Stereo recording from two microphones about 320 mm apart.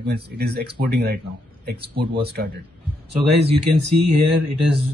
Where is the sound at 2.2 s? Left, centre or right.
Right.